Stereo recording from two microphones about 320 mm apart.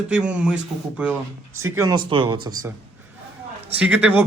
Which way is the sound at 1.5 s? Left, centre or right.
Right.